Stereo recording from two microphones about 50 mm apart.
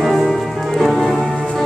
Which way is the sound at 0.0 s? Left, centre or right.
Centre.